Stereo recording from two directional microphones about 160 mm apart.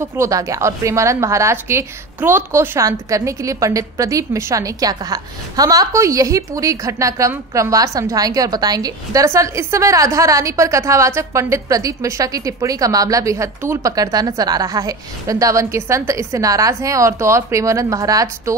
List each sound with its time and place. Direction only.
0.2 s a woman's voice: 20° right (ahead or behind)